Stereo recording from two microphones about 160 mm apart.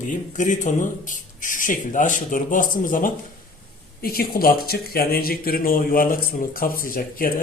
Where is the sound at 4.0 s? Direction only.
70° left (ahead or behind).